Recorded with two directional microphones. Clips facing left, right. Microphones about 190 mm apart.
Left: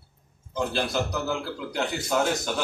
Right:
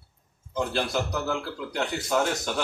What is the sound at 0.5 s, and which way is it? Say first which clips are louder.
Speech: even; centre (ahead or behind).